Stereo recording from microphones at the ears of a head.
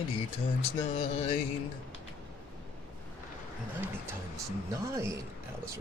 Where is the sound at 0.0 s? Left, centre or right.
Left.